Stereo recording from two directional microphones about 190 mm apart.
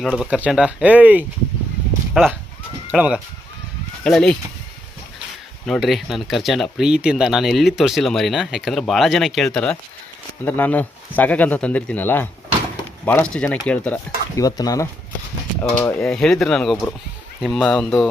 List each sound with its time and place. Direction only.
0.0 s speech: centre (ahead or behind)
5.6 s speech: centre (ahead or behind)
14.4 s speech: 20° left (ahead or behind)
15.8 s speech: 5° left (ahead or behind)